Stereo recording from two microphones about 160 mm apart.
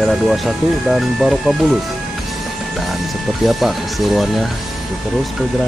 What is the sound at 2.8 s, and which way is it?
Speech, centre (ahead or behind).